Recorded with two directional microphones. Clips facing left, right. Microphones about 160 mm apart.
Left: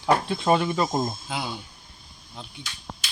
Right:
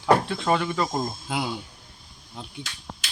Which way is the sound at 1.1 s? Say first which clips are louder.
Right 3 dB; 10° right (ahead or behind).